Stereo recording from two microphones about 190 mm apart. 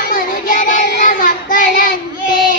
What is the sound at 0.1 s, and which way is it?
Child singing, 45° left (ahead or behind).